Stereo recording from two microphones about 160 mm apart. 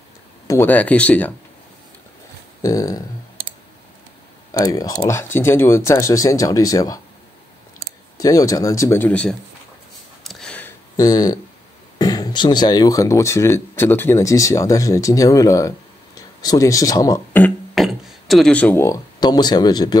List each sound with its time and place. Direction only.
0.5 s speech: 10° left (ahead or behind)
2.6 s speech: 20° left (ahead or behind)
4.5 s speech: 25° left (ahead or behind)
8.2 s speech: 20° left (ahead or behind)
10.2 s a sound: 5° left (ahead or behind)
11.0 s speech: 25° left (ahead or behind)
17.7 s a sound: centre (ahead or behind)
19.1 s speech: 25° left (ahead or behind)